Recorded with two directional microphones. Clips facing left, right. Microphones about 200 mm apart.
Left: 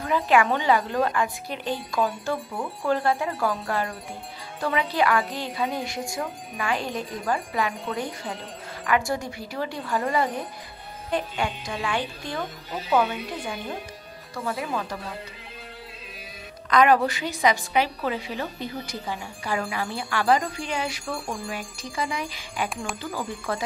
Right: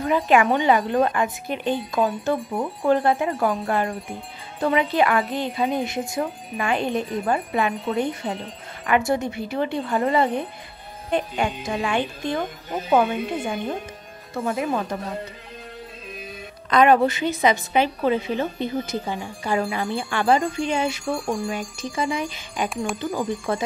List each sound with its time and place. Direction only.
0.0 s a woman's voice: 20° right (ahead or behind)
12.7 s speech: 50° right (ahead or behind)
13.3 s a woman's voice: 25° right (ahead or behind)
15.0 s speech: 40° right (ahead or behind)
16.7 s a woman's voice: 25° right (ahead or behind)